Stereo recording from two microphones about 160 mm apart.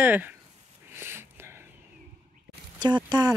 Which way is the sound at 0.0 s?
10° right (ahead or behind).